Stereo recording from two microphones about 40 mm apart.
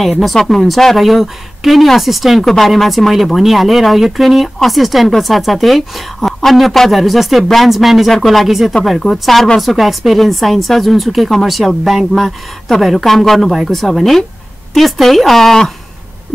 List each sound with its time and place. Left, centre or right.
0.0 s a woman's voice: centre